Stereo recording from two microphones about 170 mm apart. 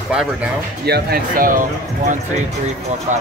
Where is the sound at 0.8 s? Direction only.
65° right (ahead or behind).